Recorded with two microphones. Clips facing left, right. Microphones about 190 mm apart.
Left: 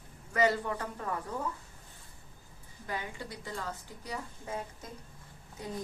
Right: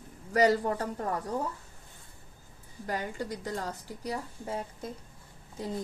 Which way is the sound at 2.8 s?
40° right (ahead or behind).